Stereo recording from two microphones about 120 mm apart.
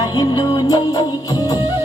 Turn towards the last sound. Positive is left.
turn(degrees=35)  # may be behind; listen again after turning